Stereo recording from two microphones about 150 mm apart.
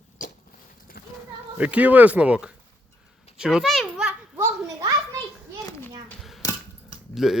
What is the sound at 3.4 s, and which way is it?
Children playing, centre (ahead or behind).